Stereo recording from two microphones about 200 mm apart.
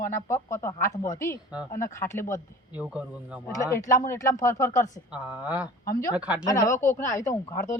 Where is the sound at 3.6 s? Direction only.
15° left (ahead or behind).